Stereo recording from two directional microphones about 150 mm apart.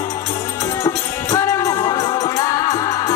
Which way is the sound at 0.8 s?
20° left (ahead or behind).